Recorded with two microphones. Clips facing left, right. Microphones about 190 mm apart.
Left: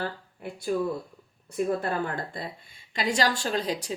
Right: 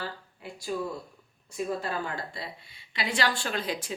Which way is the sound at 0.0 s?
55° left (ahead or behind).